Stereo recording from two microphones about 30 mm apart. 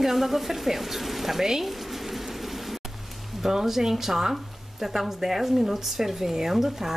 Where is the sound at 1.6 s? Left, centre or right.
Centre.